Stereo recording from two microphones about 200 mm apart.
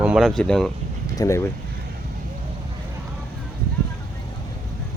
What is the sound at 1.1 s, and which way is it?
Speech, 15° left (ahead or behind).